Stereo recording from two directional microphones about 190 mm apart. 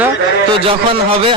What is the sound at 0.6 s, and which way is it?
Speech, 30° right (ahead or behind).